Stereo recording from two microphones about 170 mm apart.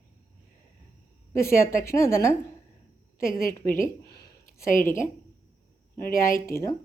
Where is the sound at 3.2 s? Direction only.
55° left (ahead or behind).